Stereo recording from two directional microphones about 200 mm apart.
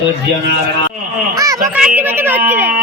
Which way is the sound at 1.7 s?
5° right (ahead or behind).